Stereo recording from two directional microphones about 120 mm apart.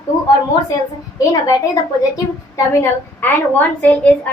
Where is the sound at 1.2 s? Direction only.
25° left (ahead or behind); by 4.3 s 10° left (ahead or behind).